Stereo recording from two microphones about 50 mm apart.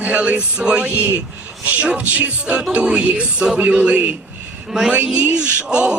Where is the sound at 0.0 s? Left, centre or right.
Right.